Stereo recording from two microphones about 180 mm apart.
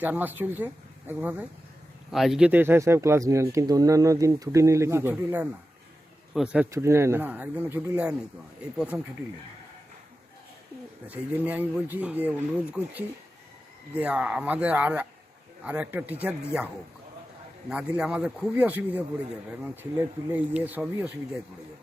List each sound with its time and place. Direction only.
0.0 s speech: 10° right (ahead or behind)
6.7 s speech: 15° right (ahead or behind)
11.1 s speech: 10° right (ahead or behind)
17.7 s speech: 5° right (ahead or behind)
20.3 s speech: 10° right (ahead or behind)